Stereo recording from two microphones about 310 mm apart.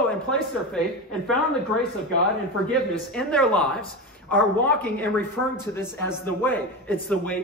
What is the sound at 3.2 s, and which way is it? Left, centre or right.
A man's voice, centre.